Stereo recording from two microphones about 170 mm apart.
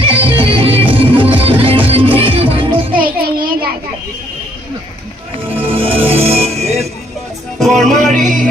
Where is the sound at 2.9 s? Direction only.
60° right (ahead or behind).